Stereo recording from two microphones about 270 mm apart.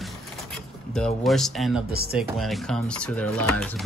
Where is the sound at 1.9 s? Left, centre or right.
Right.